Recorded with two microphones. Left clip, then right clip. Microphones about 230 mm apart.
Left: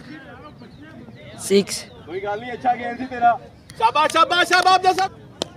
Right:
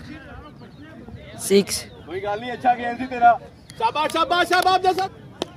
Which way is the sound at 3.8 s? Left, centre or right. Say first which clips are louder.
Left 5 dB; left.